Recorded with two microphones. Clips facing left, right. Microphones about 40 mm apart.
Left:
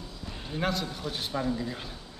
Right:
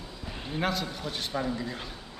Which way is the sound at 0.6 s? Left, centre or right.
Centre.